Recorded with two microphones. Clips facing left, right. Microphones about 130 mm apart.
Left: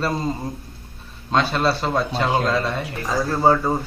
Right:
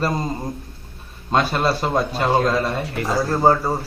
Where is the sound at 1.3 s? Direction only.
10° right (ahead or behind).